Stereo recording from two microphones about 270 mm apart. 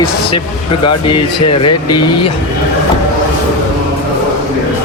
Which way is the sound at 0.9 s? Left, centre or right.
Left.